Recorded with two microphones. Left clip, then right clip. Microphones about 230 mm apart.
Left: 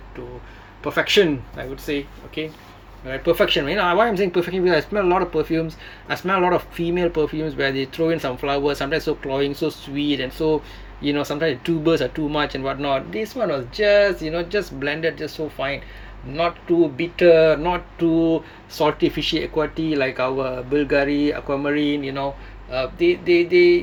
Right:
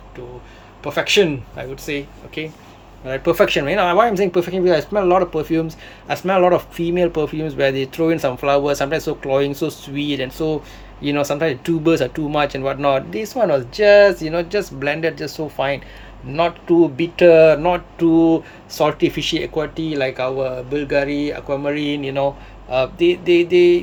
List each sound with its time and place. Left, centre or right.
0.9 s speech: centre